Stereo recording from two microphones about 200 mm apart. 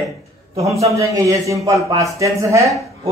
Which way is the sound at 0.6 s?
15° right (ahead or behind).